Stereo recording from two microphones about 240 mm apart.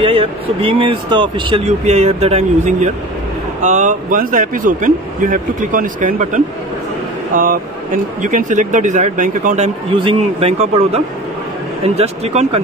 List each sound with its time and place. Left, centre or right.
0.0 s a man's voice: right